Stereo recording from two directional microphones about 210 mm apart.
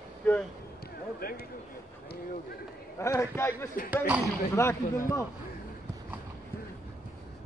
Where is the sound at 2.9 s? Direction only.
15° left (ahead or behind).